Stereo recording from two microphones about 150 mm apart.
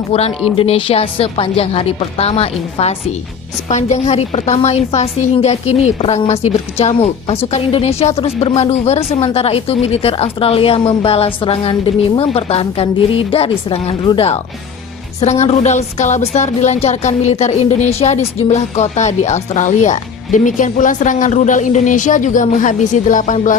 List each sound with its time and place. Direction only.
0.1 s a woman's voice: 40° left (ahead or behind); by 23.5 s 60° left (ahead or behind)